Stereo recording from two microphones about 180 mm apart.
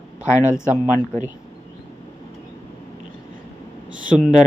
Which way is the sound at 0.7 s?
15° left (ahead or behind).